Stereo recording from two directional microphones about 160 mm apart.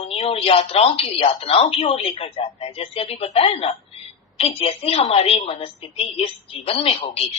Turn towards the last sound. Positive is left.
turn(degrees=35)  # may be behind; listen again after turning